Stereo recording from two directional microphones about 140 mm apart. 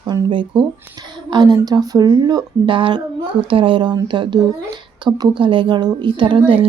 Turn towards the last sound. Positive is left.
turn(degrees=-35)  # may be behind; listen again after turning